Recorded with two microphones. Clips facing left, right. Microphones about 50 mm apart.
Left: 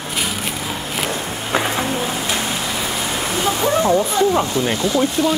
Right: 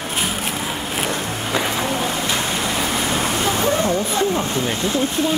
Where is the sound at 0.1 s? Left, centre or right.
Right.